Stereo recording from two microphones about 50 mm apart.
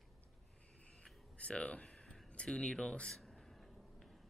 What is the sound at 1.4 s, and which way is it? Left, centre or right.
Speech, left.